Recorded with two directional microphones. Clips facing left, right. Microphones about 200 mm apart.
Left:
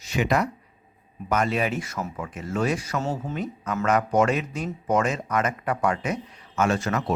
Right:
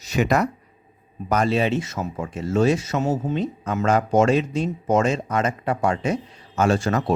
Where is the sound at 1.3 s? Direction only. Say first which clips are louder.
Right 4 dB; 30° right (ahead or behind).